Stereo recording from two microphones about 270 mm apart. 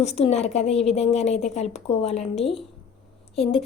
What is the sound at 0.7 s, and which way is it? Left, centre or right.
Speech, centre.